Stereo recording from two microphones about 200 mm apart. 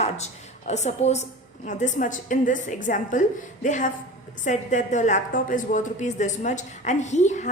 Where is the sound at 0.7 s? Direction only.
35° left (ahead or behind).